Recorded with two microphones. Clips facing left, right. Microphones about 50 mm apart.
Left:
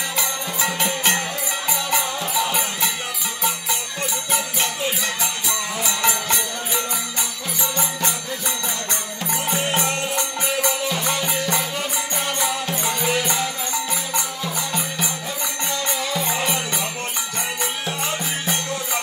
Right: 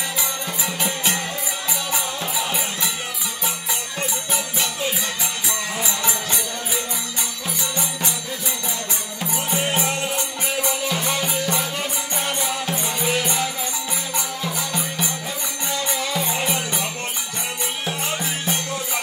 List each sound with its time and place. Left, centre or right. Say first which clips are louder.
0.6 s music: left 5 dB; left
4.3 s music: left 2 dB; left
5.9 s music: left 3 dB; left
13.2 s music: even; centre